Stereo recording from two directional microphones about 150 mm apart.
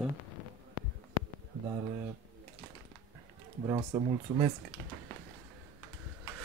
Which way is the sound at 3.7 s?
30° right (ahead or behind).